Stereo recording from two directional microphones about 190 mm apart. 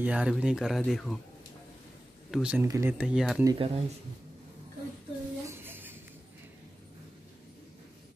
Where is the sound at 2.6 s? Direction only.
15° right (ahead or behind).